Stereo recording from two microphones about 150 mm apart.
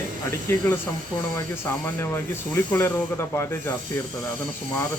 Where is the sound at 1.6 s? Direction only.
15° left (ahead or behind).